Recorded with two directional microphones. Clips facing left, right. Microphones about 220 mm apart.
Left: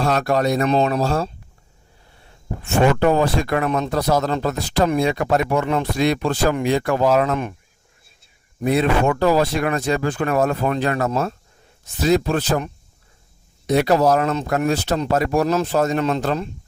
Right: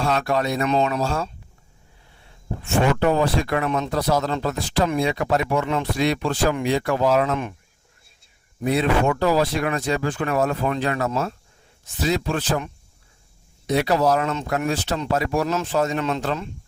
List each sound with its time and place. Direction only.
0.0 s speech: 40° left (ahead or behind)
2.9 s speech: 45° left (ahead or behind)
8.6 s speech: 50° left (ahead or behind)